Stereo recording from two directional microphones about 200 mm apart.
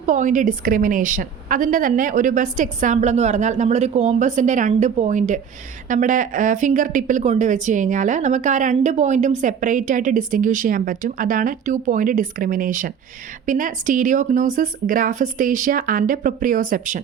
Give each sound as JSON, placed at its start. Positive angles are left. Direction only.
{"t": 0.0, "sound": "a woman's voice", "side_deg": -40}